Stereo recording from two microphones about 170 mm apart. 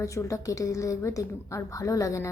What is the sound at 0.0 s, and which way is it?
A woman's voice, 20° left (ahead or behind).